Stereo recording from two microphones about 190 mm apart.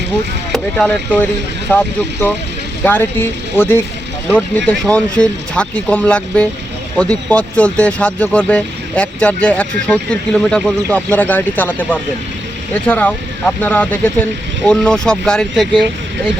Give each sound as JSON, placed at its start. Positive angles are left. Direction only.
{"t": 0.5, "sound": "speech", "side_deg": 5}